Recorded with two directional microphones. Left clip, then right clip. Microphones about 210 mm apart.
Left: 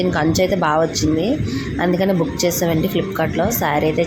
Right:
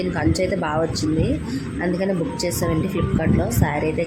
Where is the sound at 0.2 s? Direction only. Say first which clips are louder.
Left 3 dB; 5° left (ahead or behind).